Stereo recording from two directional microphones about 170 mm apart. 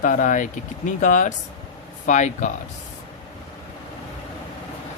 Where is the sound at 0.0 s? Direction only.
50° left (ahead or behind).